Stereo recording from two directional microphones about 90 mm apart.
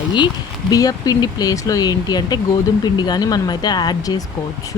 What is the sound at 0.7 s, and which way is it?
Speech, 40° left (ahead or behind).